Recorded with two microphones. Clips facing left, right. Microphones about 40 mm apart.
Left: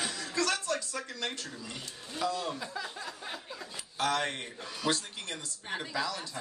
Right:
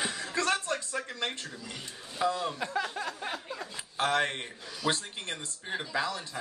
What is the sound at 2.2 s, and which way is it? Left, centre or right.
Speech, right.